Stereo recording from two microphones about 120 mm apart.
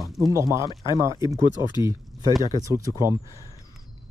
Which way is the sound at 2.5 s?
30° right (ahead or behind).